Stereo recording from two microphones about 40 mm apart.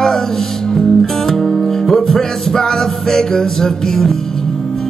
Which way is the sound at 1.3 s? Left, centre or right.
Centre.